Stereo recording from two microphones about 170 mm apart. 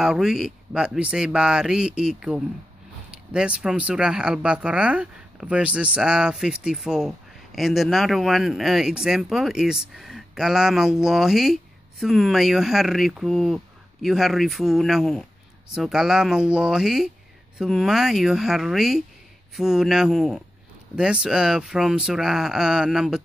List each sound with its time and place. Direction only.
0.0 s speech: 5° right (ahead or behind)